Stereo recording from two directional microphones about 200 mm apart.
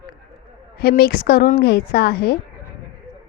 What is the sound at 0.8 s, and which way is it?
A woman's voice, 50° left (ahead or behind).